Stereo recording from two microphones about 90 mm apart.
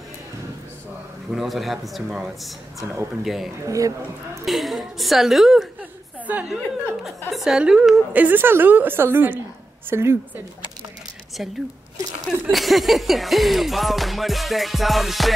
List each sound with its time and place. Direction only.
1.3 s music: centre (ahead or behind)
3.6 s speech: 35° right (ahead or behind)
4.5 s music: centre (ahead or behind)
6.1 s a sound: 15° right (ahead or behind)
6.5 s music: 5° right (ahead or behind)
8.1 s a woman's voice: 20° right (ahead or behind)
11.4 s a woman's voice: 5° right (ahead or behind)
12.4 s music: centre (ahead or behind)